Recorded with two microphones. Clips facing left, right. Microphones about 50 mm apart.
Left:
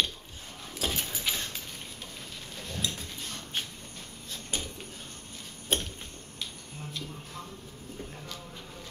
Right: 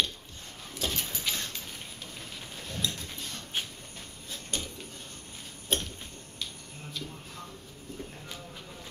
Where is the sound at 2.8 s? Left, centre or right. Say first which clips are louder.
Right 1 dB; centre.